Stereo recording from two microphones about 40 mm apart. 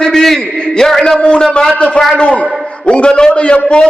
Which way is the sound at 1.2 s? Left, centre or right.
Left.